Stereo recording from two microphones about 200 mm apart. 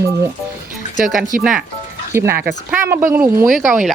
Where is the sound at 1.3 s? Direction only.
45° right (ahead or behind).